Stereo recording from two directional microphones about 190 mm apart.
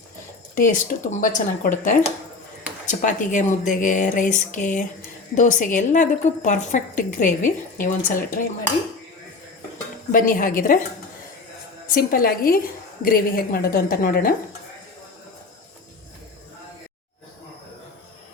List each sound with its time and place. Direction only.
0.5 s a woman's voice: 45° left (ahead or behind)
10.1 s a woman's voice: 45° left (ahead or behind)
11.9 s a woman's voice: 50° left (ahead or behind)